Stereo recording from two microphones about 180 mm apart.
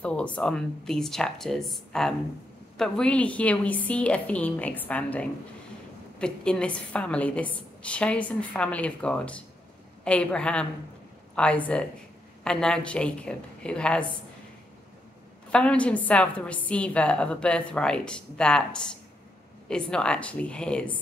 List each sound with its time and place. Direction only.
0.0 s a woman's voice: 5° left (ahead or behind)
15.5 s a woman's voice: 5° left (ahead or behind)